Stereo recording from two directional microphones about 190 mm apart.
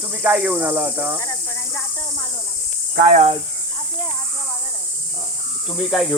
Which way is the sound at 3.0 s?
40° right (ahead or behind).